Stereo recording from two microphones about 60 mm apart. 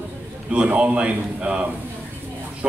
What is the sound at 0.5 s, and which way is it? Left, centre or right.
A man's voice, centre.